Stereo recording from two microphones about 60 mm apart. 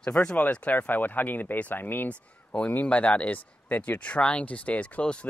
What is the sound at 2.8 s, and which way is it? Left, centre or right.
Speech, centre.